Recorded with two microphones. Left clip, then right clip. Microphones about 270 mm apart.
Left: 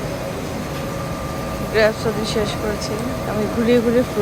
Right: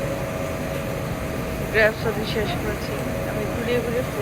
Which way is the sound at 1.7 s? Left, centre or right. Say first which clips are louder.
Left 3 dB; centre.